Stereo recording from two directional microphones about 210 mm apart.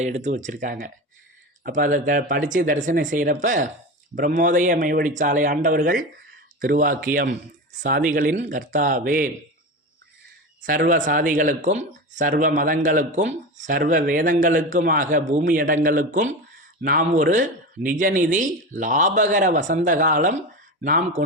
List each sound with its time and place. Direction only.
0.0 s speech: 35° right (ahead or behind)
10.6 s speech: 40° right (ahead or behind)